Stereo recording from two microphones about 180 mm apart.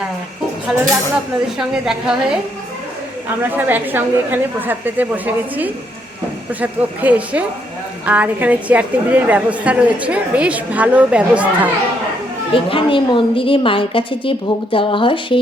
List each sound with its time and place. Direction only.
0.7 s a woman's voice: 5° right (ahead or behind)
3.5 s a woman's voice: 10° right (ahead or behind)
12.5 s a woman's voice: 30° left (ahead or behind)